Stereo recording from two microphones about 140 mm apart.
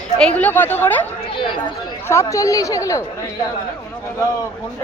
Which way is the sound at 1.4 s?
35° left (ahead or behind).